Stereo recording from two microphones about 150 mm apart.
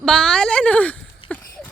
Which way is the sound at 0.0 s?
5° left (ahead or behind).